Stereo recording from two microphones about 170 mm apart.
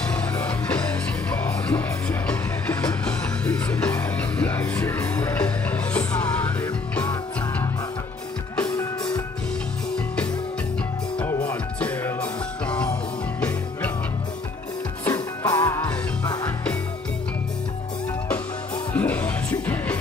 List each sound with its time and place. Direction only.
0.4 s music: 10° left (ahead or behind)
8.5 s music: 15° left (ahead or behind)
11.1 s music: 10° left (ahead or behind)
15.0 s music: 10° left (ahead or behind)
18.9 s music: 10° left (ahead or behind)